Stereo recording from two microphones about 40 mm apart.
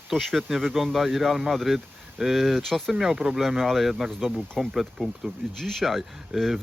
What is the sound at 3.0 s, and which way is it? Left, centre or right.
Speech, centre.